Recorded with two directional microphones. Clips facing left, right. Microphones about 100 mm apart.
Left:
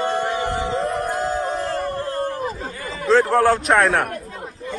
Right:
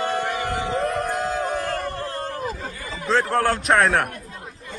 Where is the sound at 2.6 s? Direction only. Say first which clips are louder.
Left 3 dB; 40° left (ahead or behind).